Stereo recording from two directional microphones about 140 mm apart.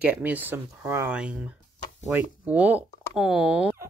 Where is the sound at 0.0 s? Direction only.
10° right (ahead or behind).